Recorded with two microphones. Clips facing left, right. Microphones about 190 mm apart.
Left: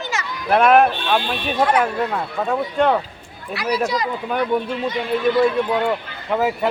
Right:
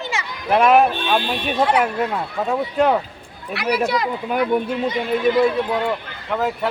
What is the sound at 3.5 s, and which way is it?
Speech, 60° right (ahead or behind).